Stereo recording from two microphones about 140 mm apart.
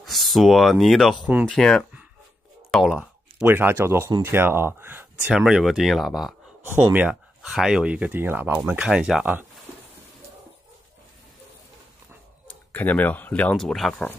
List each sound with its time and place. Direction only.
0.0 s speech: centre (ahead or behind)
2.7 s a sound: 5° right (ahead or behind)
3.4 s speech: 15° right (ahead or behind)
5.2 s speech: 5° right (ahead or behind)
6.6 s speech: 15° right (ahead or behind)
12.7 s speech: 10° left (ahead or behind)